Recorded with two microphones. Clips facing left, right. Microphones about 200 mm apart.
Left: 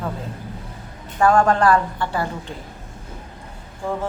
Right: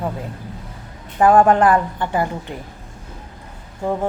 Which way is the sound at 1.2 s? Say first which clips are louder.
Right 3 dB; 20° right (ahead or behind).